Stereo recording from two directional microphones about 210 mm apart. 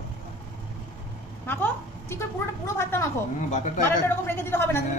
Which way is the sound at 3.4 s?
35° left (ahead or behind).